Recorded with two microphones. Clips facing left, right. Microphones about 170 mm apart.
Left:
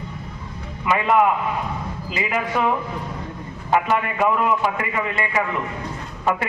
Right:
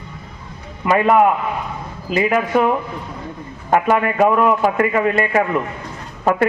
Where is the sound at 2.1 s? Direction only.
50° right (ahead or behind).